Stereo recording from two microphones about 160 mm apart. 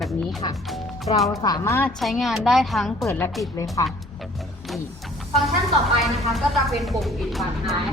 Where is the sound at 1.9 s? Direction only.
Centre (ahead or behind).